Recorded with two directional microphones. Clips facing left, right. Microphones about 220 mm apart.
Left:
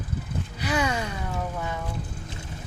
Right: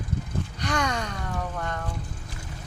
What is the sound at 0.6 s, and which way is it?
Speech, 5° left (ahead or behind).